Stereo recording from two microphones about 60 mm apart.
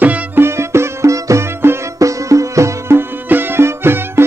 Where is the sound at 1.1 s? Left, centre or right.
Right.